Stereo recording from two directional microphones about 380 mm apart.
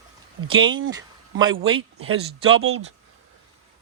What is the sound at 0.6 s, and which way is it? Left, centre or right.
Speech, right.